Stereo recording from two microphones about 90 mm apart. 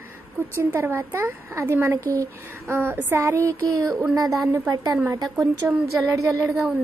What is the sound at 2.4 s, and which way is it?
A woman's voice, 25° right (ahead or behind).